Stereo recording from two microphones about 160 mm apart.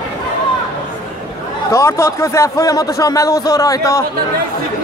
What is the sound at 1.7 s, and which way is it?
Speech, 15° left (ahead or behind).